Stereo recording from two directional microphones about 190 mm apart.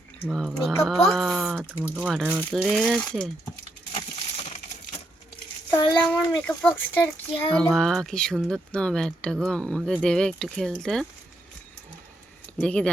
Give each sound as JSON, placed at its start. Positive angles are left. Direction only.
{"t": 0.3, "sound": "speech", "side_deg": 0}
{"t": 3.9, "sound": "crushing", "side_deg": 30}
{"t": 5.7, "sound": "a child's voice", "side_deg": 20}
{"t": 6.0, "sound": "a child's voice", "side_deg": 5}
{"t": 12.5, "sound": "speech", "side_deg": 5}